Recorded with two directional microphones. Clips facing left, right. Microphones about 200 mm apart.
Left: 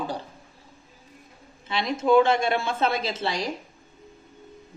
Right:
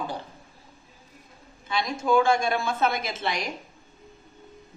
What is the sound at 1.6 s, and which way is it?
A woman's voice, 25° left (ahead or behind).